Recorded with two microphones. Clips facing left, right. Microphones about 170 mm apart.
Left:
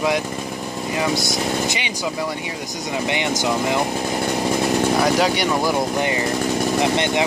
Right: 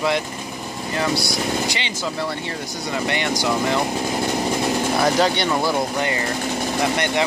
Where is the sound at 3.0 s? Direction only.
15° left (ahead or behind).